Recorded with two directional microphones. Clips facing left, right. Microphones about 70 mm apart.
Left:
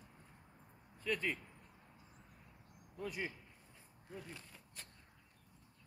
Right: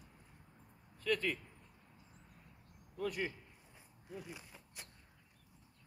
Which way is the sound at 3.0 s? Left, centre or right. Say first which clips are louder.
Right 4 dB; right.